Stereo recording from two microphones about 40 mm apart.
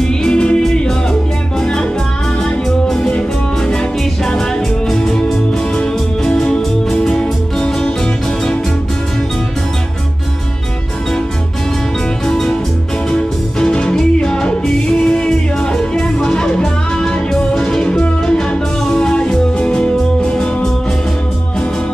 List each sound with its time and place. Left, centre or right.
0.0 s music: centre
1.6 s music: centre
3.1 s music: left
12.3 s music: centre